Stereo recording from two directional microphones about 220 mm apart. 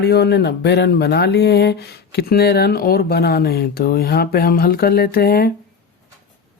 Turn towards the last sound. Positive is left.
turn(degrees=45)  # may be behind; listen again after turning